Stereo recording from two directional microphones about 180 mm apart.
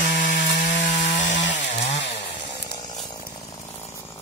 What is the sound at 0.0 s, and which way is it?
Chainsaw, 45° left (ahead or behind).